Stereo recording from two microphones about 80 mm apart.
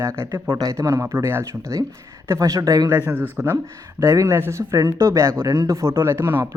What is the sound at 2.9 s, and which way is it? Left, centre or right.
Speech, right.